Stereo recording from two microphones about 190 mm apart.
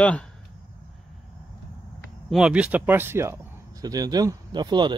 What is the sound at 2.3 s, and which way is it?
Speech, 5° right (ahead or behind).